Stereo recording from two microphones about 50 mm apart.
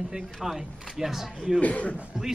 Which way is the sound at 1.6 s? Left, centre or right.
Left.